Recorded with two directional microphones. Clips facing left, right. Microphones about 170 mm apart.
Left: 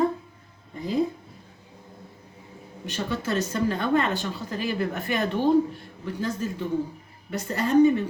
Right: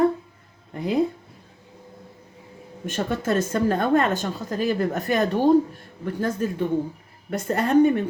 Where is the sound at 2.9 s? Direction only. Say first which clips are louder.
Right 4 dB; 50° right (ahead or behind).